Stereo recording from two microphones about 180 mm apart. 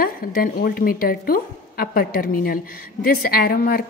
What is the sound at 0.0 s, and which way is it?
A woman's voice, 55° left (ahead or behind).